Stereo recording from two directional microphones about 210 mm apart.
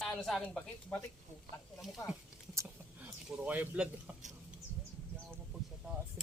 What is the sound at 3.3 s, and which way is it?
Speech, 5° right (ahead or behind).